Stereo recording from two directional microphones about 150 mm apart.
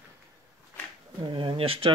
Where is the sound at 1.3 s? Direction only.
35° right (ahead or behind).